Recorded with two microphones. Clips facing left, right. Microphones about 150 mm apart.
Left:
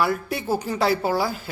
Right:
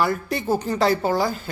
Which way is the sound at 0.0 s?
5° left (ahead or behind).